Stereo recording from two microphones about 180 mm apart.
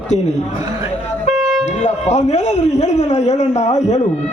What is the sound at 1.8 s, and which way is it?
Speech, 40° left (ahead or behind).